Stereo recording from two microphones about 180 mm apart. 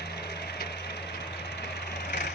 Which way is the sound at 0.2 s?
65° left (ahead or behind).